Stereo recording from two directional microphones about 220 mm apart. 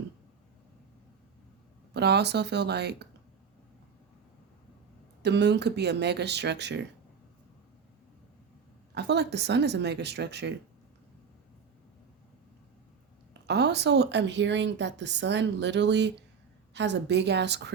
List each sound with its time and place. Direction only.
1.9 s a woman's voice: 50° right (ahead or behind)
5.2 s a woman's voice: 50° right (ahead or behind)
9.0 s a woman's voice: 50° right (ahead or behind)
13.5 s a woman's voice: 50° right (ahead or behind)